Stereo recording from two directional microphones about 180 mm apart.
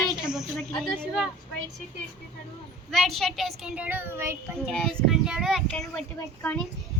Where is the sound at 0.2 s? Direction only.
5° right (ahead or behind).